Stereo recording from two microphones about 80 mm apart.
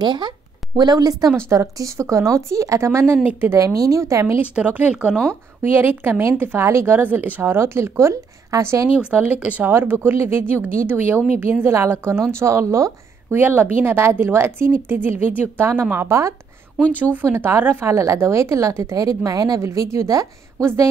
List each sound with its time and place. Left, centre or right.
0.0 s speech: right
0.7 s speech: right
1.3 s a woman's voice: right
3.5 s a woman's voice: right
4.4 s speech: centre
5.1 s speech: centre
5.6 s a woman's voice: right
8.9 s a woman's voice: centre; by 12.9 s right
13.3 s speech: right
16.9 s a woman's voice: right